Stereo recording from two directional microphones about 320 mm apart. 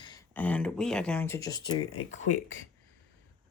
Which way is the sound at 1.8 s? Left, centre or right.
Left.